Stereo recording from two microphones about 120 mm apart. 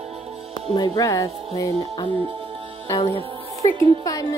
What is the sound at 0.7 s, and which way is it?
Speech, 30° left (ahead or behind).